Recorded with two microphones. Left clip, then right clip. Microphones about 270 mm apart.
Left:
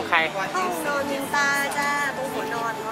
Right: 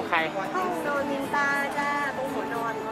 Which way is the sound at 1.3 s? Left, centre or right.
Centre.